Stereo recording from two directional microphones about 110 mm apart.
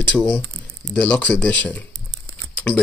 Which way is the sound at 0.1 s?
5° left (ahead or behind).